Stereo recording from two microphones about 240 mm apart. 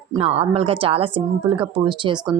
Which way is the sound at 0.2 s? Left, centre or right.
Right.